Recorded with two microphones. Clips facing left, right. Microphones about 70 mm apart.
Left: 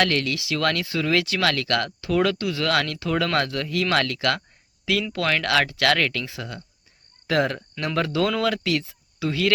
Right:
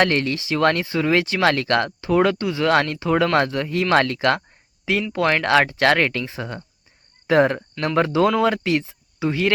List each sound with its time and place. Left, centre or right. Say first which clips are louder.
0.0 s speech: right 3 dB; right
5.1 s speech: right 6 dB; right